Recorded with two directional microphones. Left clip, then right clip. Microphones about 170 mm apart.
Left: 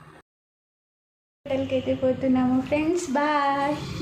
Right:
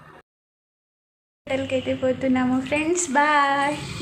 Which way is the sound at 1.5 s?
5° right (ahead or behind).